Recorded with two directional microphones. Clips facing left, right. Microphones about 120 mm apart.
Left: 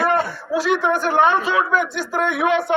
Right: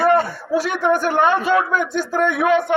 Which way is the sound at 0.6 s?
50° right (ahead or behind).